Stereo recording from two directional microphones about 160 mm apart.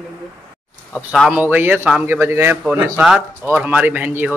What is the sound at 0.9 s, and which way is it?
A man's voice, centre (ahead or behind).